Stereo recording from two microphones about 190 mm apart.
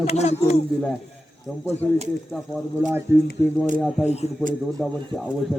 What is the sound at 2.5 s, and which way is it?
Speech, 10° right (ahead or behind).